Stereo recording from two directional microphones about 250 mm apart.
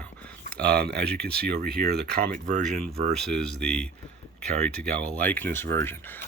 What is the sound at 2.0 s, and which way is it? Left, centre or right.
Speech, right.